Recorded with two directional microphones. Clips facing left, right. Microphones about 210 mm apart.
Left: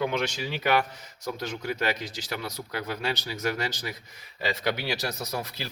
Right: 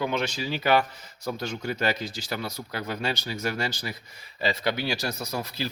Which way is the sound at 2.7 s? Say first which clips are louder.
Right 1 dB; 10° left (ahead or behind).